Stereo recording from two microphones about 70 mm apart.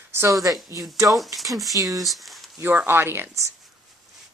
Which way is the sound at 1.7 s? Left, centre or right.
Right.